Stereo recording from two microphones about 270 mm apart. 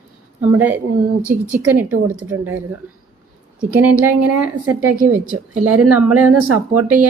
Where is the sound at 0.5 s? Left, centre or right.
Centre.